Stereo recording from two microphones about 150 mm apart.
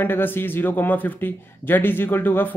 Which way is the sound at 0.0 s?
15° left (ahead or behind).